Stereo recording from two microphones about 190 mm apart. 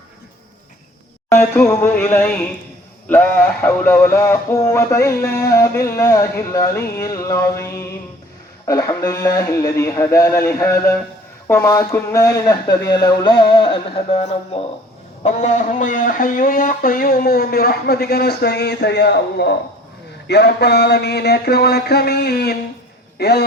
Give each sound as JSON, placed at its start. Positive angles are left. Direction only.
{"t": 1.3, "sound": "music", "side_deg": 10}
{"t": 11.4, "sound": "speech", "side_deg": 15}
{"t": 20.2, "sound": "a sound", "side_deg": 60}
{"t": 23.1, "sound": "a man's voice", "side_deg": 60}